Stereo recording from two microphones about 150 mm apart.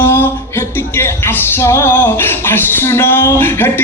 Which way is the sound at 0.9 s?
15° left (ahead or behind).